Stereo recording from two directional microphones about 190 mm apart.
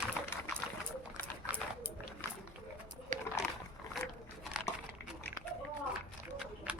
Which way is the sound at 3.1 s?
40° right (ahead or behind).